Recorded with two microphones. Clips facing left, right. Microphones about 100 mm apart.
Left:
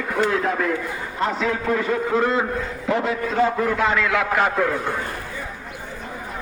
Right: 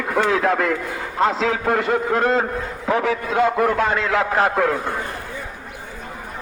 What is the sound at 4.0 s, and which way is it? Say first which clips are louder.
Speech: right 1 dB; 35° right (ahead or behind).